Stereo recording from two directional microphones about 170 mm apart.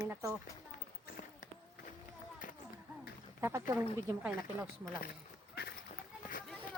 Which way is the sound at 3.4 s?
15° right (ahead or behind).